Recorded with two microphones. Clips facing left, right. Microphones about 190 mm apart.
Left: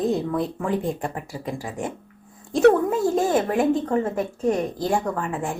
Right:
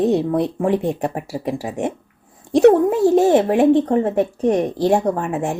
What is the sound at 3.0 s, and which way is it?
Speech, 35° right (ahead or behind).